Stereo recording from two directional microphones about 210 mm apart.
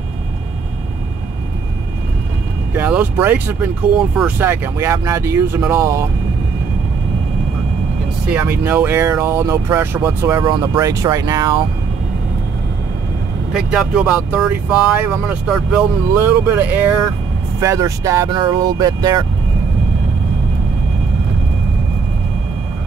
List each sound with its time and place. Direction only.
2.7 s speech: 10° right (ahead or behind)
8.3 s speech: 5° right (ahead or behind)
13.5 s speech: 5° right (ahead or behind); by 19.2 s 20° right (ahead or behind)